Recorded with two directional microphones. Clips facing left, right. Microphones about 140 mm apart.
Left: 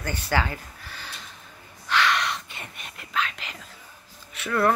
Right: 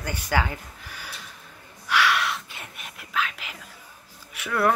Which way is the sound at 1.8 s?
10° right (ahead or behind).